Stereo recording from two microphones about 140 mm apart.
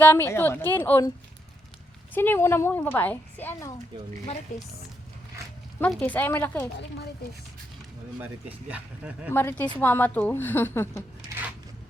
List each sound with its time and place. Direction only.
0.0 s a woman's voice: 15° left (ahead or behind)
2.1 s a woman's voice: 15° left (ahead or behind)
4.5 s a woman's voice: 60° left (ahead or behind)
5.4 s a sound: 20° right (ahead or behind)
6.0 s a woman's voice: 15° left (ahead or behind)
8.2 s speech: 10° right (ahead or behind)
9.3 s a woman's voice: 15° left (ahead or behind)